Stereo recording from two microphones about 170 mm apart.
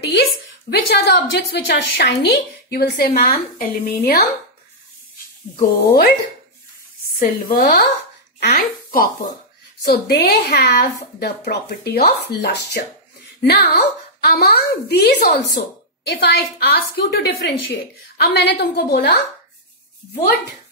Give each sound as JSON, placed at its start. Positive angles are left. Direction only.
{"t": 0.0, "sound": "a woman's voice", "side_deg": 75}
{"t": 3.2, "sound": "speech", "side_deg": 55}
{"t": 5.6, "sound": "speech", "side_deg": 55}
{"t": 7.2, "sound": "speech", "side_deg": 60}
{"t": 9.8, "sound": "a woman's voice", "side_deg": 80}